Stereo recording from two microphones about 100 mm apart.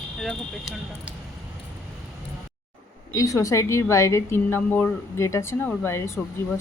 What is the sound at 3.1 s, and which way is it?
Speech, 35° left (ahead or behind).